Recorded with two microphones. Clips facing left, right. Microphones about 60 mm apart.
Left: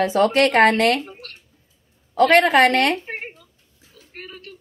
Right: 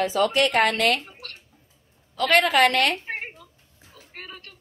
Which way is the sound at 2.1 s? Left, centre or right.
Left.